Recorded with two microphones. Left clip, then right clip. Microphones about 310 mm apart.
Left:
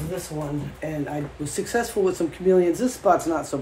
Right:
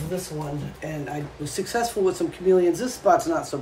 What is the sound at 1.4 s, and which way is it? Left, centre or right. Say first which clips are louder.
Speech: even; left.